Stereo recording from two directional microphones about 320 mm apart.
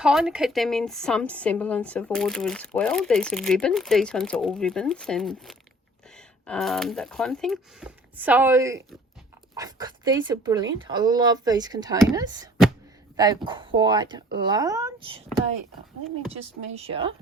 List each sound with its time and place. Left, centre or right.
0.0 s a woman's voice: centre
16.4 s speech: centre